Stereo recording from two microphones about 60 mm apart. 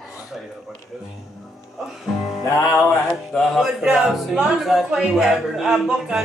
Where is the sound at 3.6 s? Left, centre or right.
Centre.